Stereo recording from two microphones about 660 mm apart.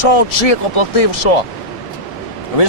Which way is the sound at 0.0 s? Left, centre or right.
Left.